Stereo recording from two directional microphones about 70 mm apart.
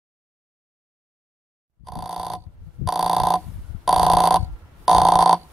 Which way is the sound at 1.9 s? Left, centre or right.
Centre.